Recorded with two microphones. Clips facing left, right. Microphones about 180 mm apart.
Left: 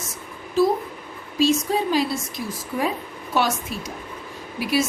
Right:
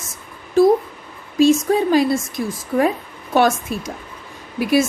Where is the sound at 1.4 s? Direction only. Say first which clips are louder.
Right 6 dB; 50° right (ahead or behind).